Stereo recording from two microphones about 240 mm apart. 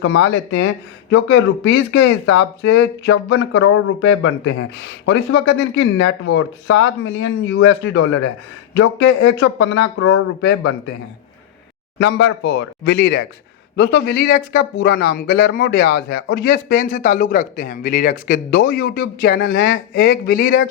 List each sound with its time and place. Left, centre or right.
0.0 s speech: left
12.1 s speech: left